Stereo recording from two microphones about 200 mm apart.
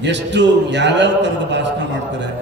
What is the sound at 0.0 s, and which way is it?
A man's voice, 60° right (ahead or behind).